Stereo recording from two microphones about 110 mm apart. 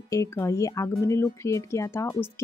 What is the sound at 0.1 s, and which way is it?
Speech, 25° left (ahead or behind).